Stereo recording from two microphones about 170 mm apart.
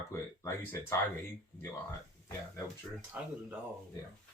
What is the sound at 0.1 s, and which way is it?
Speech, 15° left (ahead or behind).